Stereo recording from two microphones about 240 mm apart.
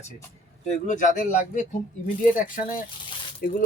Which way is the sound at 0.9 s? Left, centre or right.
Left.